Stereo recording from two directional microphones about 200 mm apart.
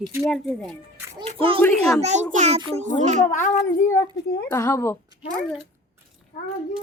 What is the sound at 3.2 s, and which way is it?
Speech, 40° left (ahead or behind).